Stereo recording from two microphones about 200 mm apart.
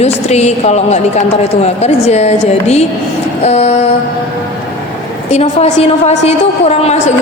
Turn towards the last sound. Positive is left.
turn(degrees=30)  # may be behind; listen again after turning